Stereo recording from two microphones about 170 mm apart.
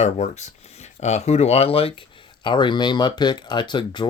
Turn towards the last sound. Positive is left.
turn(degrees=25)  # may be behind; listen again after turning